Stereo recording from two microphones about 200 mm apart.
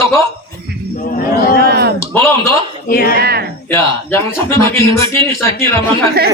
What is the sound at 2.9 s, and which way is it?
Speech, 45° left (ahead or behind).